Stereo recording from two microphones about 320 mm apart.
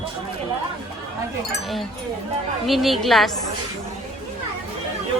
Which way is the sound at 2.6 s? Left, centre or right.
Centre.